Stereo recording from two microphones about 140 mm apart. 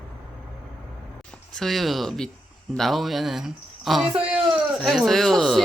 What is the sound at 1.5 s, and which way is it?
Speech, centre (ahead or behind).